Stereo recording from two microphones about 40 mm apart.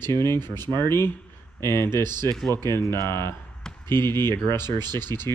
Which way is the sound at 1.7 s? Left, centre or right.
Left.